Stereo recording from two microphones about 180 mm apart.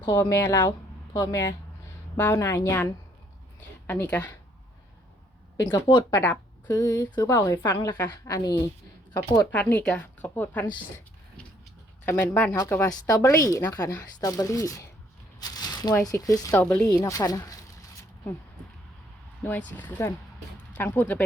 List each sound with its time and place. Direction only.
0.0 s a woman's voice: 15° left (ahead or behind)
5.6 s speech: 25° left (ahead or behind)
6.1 s a woman's voice: 10° left (ahead or behind)
12.0 s a woman's voice: 10° left (ahead or behind)
17.0 s speech: 20° left (ahead or behind)
19.4 s a woman's voice: 10° left (ahead or behind)